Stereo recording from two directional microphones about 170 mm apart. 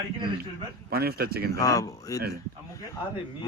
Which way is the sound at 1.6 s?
20° left (ahead or behind).